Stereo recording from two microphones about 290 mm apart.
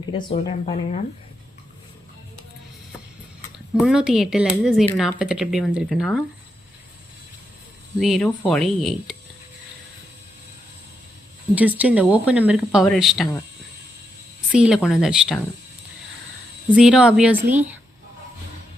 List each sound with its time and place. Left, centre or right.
0.1 s speech: centre
3.8 s speech: centre
7.9 s speech: centre
11.5 s speech: centre
14.5 s speech: centre
16.7 s speech: centre